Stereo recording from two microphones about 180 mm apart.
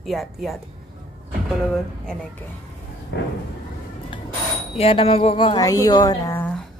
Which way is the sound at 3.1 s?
75° left (ahead or behind).